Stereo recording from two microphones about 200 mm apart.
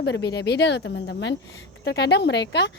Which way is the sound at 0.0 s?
55° left (ahead or behind).